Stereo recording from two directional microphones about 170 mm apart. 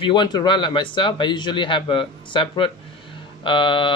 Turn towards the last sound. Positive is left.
turn(degrees=30)  # may be behind; listen again after turning